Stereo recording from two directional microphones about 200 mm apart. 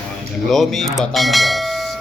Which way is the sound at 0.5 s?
Centre (ahead or behind).